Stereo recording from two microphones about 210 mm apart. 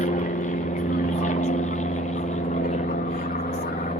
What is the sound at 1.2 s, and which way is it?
Vehicle, 35° left (ahead or behind).